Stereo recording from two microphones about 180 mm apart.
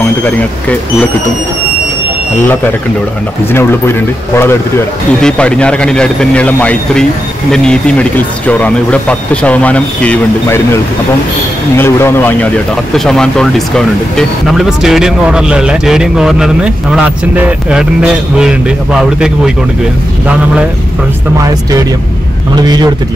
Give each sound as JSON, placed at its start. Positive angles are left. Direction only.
{"t": 5.2, "sound": "speech", "side_deg": 5}
{"t": 11.7, "sound": "speech", "side_deg": 15}
{"t": 22.6, "sound": "a man's voice", "side_deg": -20}